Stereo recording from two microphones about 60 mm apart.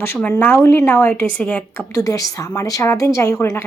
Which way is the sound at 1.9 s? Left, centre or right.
Left.